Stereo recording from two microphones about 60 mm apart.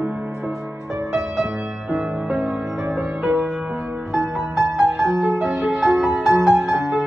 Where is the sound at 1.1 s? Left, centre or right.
Centre.